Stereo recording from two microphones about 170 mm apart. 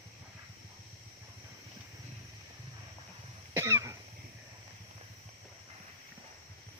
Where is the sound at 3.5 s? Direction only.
15° right (ahead or behind).